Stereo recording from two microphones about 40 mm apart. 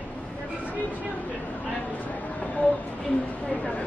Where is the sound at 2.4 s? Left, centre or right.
Left.